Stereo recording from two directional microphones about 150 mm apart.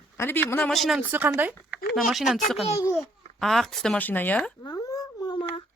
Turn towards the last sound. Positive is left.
turn(degrees=30)  # may be behind; listen again after turning